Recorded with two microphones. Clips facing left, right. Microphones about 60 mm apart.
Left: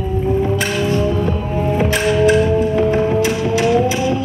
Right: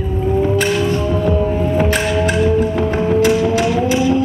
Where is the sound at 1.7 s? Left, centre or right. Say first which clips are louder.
Left 3 dB; right.